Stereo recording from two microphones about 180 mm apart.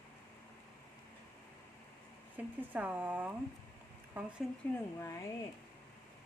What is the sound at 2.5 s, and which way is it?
Speech, 10° right (ahead or behind).